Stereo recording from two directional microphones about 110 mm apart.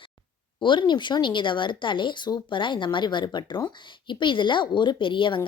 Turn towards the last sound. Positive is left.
turn(degrees=50)  # may be behind; listen again after turning